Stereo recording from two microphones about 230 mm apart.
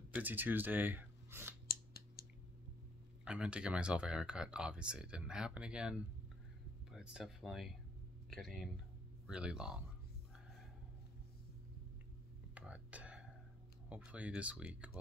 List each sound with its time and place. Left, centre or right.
0.1 s speech: centre
1.7 s a sound: left
3.3 s speech: centre
12.5 s whispering: centre
13.8 s speech: centre